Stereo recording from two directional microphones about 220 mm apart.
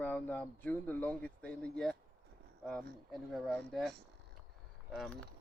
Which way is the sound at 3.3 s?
Centre (ahead or behind).